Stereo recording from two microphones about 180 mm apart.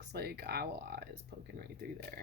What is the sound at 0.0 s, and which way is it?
Speech, 65° right (ahead or behind).